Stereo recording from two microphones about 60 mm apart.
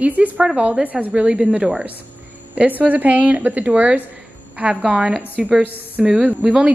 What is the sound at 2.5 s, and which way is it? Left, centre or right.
A woman's voice, right.